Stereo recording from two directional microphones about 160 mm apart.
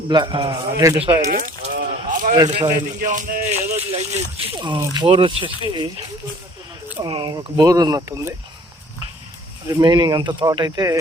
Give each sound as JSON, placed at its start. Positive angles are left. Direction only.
{"t": 0.1, "sound": "speech", "side_deg": -30}
{"t": 1.3, "sound": "a sound", "side_deg": -55}
{"t": 2.3, "sound": "speech", "side_deg": -25}
{"t": 2.7, "sound": "speech", "side_deg": -55}
{"t": 3.8, "sound": "speech", "side_deg": -35}
{"t": 7.0, "sound": "speech", "side_deg": -30}
{"t": 9.6, "sound": "speech", "side_deg": -30}